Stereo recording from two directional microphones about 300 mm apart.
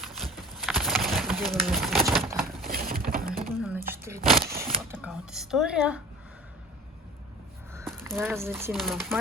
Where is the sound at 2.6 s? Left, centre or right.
Right.